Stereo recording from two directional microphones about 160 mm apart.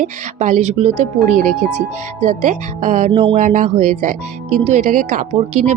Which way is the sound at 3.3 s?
50° right (ahead or behind).